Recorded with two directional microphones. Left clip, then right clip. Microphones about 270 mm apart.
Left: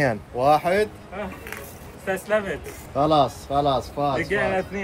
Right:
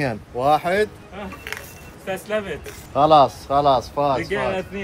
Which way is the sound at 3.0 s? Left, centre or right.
Centre.